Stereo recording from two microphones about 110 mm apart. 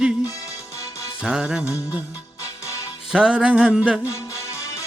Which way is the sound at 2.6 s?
30° left (ahead or behind).